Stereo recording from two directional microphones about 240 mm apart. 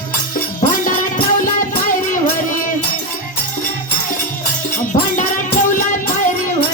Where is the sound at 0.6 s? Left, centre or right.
Left.